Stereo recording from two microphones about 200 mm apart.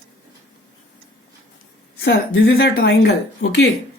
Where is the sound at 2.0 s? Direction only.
55° left (ahead or behind).